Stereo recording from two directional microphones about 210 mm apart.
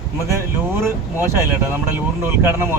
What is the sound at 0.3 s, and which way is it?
Speech, 10° right (ahead or behind).